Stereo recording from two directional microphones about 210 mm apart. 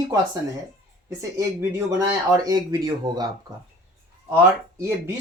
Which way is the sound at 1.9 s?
15° right (ahead or behind).